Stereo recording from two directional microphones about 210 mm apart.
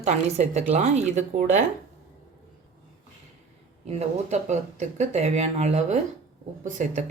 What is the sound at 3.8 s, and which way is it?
Speech, 30° right (ahead or behind).